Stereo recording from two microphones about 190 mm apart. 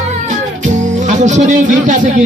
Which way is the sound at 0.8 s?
40° right (ahead or behind).